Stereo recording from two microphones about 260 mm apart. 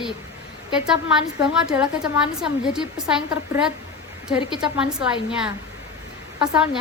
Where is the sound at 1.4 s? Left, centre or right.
Centre.